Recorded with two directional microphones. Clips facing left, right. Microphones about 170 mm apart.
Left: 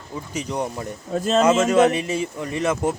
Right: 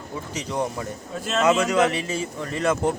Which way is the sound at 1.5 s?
25° left (ahead or behind).